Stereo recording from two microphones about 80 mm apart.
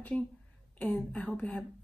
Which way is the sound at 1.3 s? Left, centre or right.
Centre.